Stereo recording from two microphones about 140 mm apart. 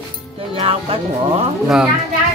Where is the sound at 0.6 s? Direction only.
45° right (ahead or behind).